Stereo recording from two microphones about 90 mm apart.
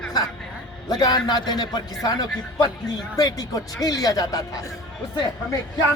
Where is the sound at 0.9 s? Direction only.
50° left (ahead or behind).